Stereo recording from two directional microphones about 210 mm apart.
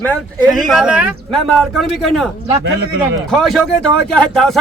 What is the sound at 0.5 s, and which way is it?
Speech, centre (ahead or behind).